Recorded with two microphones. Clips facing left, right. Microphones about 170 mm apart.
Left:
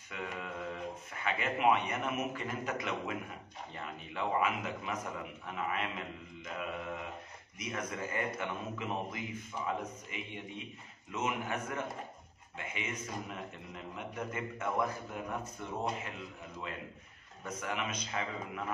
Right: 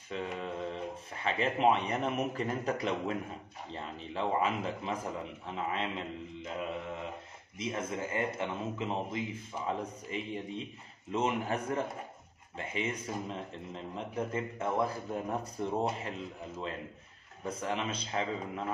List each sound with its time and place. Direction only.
0.1 s a man's voice: 30° right (ahead or behind)